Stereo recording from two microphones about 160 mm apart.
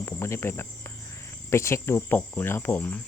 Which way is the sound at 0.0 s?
15° left (ahead or behind).